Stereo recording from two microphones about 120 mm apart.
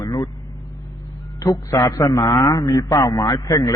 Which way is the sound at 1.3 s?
30° left (ahead or behind).